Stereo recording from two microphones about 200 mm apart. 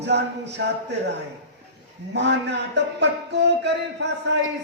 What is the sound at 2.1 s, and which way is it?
Speech, 60° right (ahead or behind).